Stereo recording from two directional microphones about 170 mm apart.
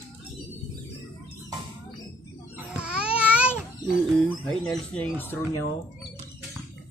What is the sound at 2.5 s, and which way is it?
Babbling, 5° right (ahead or behind).